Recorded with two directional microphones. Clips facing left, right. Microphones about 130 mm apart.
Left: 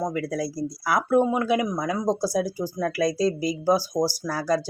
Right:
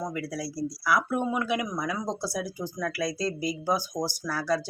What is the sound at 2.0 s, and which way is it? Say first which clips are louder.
Speech: left 8 dB; 40° left (ahead or behind).